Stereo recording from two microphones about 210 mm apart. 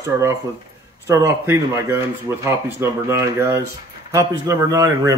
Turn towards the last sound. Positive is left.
turn(degrees=-15)  # may be behind; listen again after turning